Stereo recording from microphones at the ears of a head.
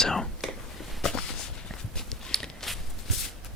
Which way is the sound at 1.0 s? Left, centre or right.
Left.